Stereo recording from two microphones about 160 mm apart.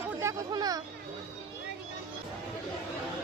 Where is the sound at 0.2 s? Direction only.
20° right (ahead or behind).